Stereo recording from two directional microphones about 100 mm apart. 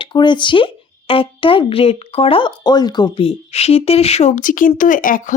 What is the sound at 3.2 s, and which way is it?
Speech, 80° left.